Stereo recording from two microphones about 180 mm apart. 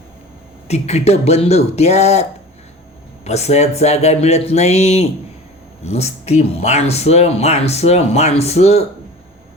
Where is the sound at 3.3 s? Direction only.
35° left (ahead or behind).